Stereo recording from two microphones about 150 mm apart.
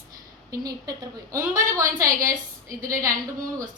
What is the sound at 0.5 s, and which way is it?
A woman's voice, 25° right (ahead or behind).